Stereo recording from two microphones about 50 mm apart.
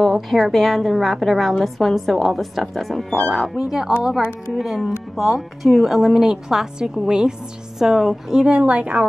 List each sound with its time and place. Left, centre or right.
0.0 s speech: centre
3.5 s a woman's voice: centre
8.5 s a woman's voice: right